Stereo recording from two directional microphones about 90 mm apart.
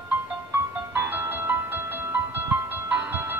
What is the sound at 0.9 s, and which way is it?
Music, 20° right (ahead or behind).